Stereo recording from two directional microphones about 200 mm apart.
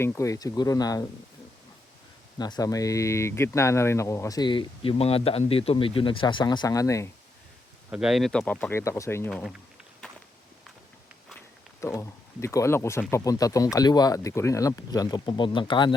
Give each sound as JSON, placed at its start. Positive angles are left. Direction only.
{"t": 0.0, "sound": "speech", "side_deg": 15}
{"t": 2.4, "sound": "speech", "side_deg": 20}
{"t": 7.9, "sound": "speech", "side_deg": -5}
{"t": 9.3, "sound": "speech", "side_deg": 0}
{"t": 11.8, "sound": "speech", "side_deg": 15}